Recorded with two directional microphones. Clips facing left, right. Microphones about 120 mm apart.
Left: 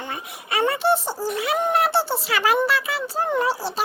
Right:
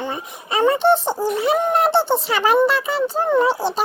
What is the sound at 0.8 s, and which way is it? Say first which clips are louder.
Speech: right 4 dB; 5° left (ahead or behind).